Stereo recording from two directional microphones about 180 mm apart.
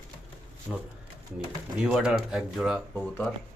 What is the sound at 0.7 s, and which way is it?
A man's voice, centre (ahead or behind).